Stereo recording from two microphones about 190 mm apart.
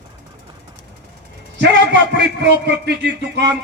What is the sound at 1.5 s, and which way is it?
A man's voice, 65° right (ahead or behind).